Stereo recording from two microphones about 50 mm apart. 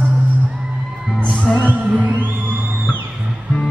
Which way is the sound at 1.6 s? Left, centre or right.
Right.